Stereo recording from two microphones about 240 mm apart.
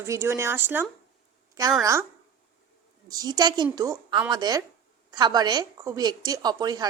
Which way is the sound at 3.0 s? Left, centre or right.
Centre.